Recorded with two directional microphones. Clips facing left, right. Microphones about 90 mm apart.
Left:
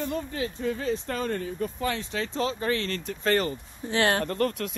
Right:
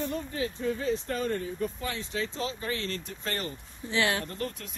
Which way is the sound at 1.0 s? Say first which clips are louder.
Left 1 dB; 70° left (ahead or behind).